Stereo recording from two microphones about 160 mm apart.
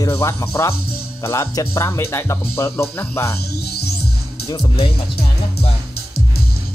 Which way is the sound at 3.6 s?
80° left.